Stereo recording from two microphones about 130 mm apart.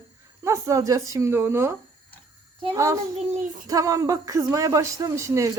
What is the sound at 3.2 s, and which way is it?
Child singing, 65° right (ahead or behind).